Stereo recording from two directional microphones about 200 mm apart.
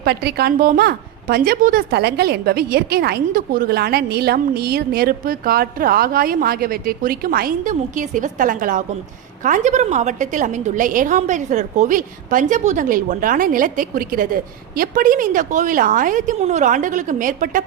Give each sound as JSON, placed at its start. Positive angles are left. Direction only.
{"t": 0.0, "sound": "a woman's voice", "side_deg": -55}